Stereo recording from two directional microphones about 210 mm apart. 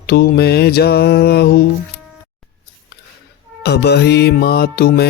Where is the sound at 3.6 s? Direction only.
50° left (ahead or behind).